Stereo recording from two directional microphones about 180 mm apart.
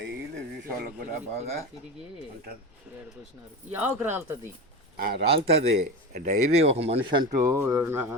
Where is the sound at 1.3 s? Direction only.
35° right (ahead or behind).